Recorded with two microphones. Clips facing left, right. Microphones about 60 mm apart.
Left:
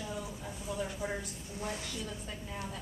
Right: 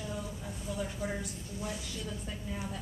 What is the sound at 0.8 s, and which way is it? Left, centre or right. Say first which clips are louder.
Speech: even; centre.